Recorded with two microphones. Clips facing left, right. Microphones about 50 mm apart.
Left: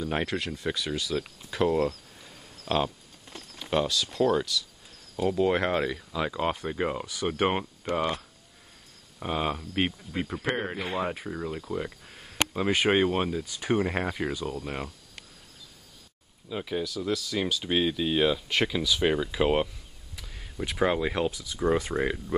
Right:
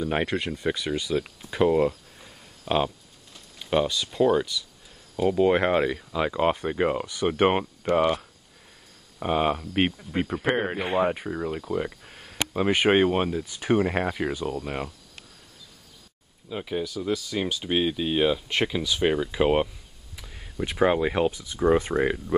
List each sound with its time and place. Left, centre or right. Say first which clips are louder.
0.0 s speech: right 3 dB; centre
9.2 s speech: right 5 dB; centre
13.5 s speech: right 4 dB; right
13.7 s speech: right 3 dB; centre
16.4 s speech: right 1 dB; centre
21.9 s speech: right 4 dB; centre